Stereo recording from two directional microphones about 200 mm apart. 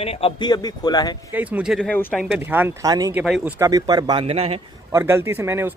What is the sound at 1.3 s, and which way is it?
Speech, 5° right (ahead or behind).